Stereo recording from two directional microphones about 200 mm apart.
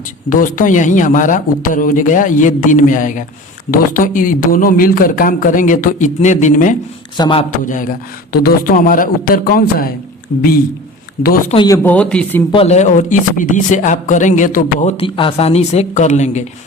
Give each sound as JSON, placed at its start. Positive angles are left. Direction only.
{"t": 0.3, "sound": "a man's voice", "side_deg": 40}
{"t": 7.2, "sound": "speech", "side_deg": 25}
{"t": 7.5, "sound": "a man's voice", "side_deg": 40}
{"t": 11.5, "sound": "speech", "side_deg": 20}
{"t": 11.8, "sound": "speech", "side_deg": 5}
{"t": 12.5, "sound": "a man's voice", "side_deg": 30}